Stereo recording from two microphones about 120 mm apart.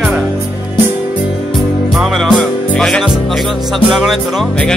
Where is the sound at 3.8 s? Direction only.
Centre (ahead or behind).